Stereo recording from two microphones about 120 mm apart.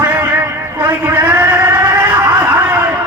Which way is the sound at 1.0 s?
20° right (ahead or behind).